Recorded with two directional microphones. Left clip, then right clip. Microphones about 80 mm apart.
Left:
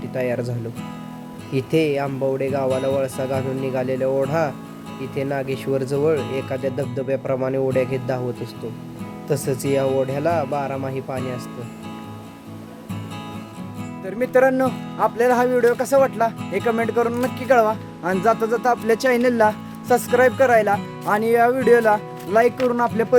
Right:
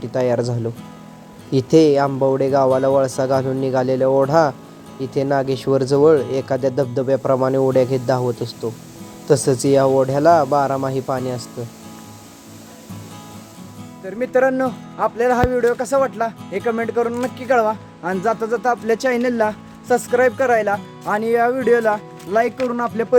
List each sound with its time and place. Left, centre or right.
0.1 s speech: right
1.5 s speech: right
7.7 s speech: right
9.2 s speech: right
14.0 s speech: centre